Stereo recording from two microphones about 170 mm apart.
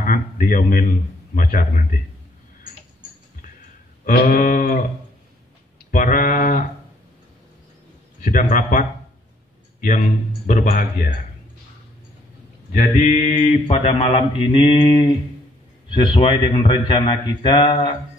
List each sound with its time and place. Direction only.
0.0 s a man's voice: 55° left (ahead or behind)
4.0 s a sound: 60° left (ahead or behind)
5.9 s speech: 50° left (ahead or behind)
8.2 s a man's voice: 50° left (ahead or behind)
12.7 s a man's voice: 45° left (ahead or behind)
13.3 s mantra: 30° left (ahead or behind)
15.9 s a man's voice: 30° left (ahead or behind)